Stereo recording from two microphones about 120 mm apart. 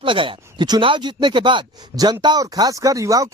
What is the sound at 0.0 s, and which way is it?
Speech, 45° right (ahead or behind).